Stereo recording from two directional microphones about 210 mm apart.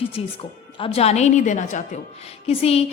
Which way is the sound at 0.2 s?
30° left (ahead or behind).